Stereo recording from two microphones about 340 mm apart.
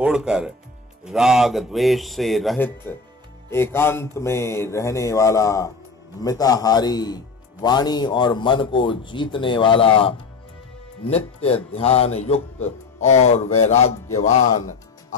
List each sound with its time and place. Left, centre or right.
0.0 s speech: centre
13.6 s music: centre